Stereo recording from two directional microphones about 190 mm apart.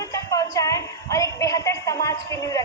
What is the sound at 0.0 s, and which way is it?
Music, 20° left (ahead or behind).